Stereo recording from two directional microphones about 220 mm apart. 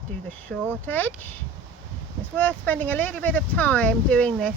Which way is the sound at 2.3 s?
10° left (ahead or behind).